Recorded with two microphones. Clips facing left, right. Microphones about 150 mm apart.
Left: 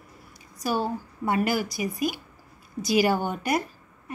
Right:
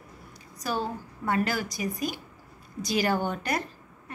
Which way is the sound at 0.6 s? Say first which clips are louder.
Left 4 dB; 10° left (ahead or behind).